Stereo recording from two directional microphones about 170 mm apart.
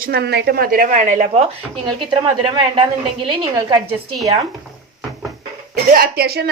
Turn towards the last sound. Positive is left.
turn(degrees=-70)  # may be behind; listen again after turning